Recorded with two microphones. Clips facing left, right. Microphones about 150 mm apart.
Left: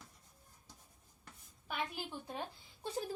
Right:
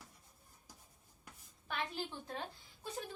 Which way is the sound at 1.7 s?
10° left (ahead or behind).